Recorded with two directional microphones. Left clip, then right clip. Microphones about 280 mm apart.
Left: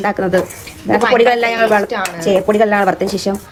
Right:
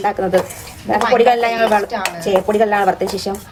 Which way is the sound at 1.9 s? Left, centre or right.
Centre.